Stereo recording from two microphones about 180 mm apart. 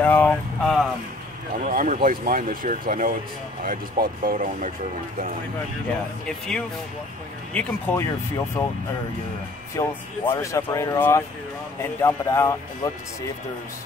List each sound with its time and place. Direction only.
0.0 s a sound: 10° left (ahead or behind)
1.6 s speech: 50° right (ahead or behind)
6.2 s speech: 5° left (ahead or behind)
9.8 s speech: 15° left (ahead or behind)